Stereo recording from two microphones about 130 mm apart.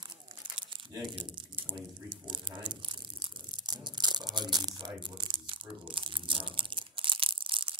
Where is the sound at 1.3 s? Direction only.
40° right (ahead or behind).